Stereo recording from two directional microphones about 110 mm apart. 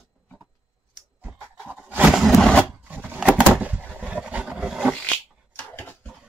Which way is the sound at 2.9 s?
15° right (ahead or behind).